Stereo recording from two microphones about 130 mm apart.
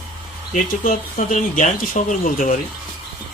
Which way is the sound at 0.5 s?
75° left (ahead or behind).